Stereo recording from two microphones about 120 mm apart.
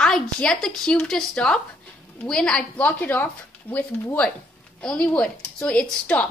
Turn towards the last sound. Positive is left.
turn(degrees=10)  # may be behind; listen again after turning